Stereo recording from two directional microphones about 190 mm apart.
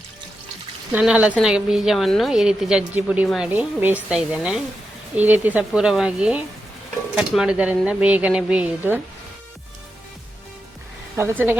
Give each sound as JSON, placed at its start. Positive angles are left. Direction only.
{"t": 0.9, "sound": "a woman's voice", "side_deg": -5}
{"t": 11.2, "sound": "speech", "side_deg": -10}